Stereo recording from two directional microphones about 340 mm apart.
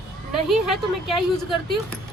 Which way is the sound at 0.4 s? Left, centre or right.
Centre.